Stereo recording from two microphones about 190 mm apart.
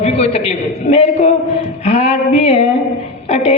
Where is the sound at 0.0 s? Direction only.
35° left (ahead or behind).